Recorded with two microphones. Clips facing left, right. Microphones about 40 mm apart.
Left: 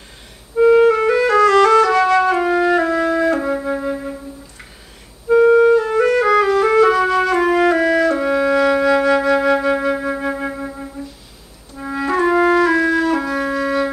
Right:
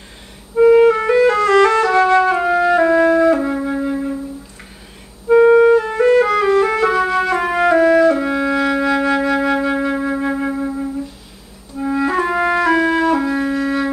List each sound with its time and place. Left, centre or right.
0.6 s clarinet: centre
1.0 s music: centre
2.2 s music: centre
2.8 s music: right
3.3 s flute: centre
5.3 s clarinet: centre
6.2 s music: centre
13.4 s flute: centre